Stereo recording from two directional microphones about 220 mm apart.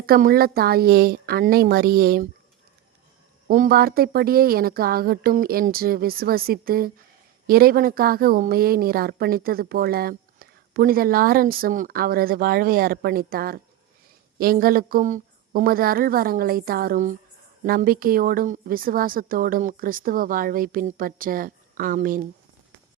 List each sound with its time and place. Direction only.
0.0 s a woman's voice: 40° right (ahead or behind)
3.5 s a woman's voice: 40° right (ahead or behind)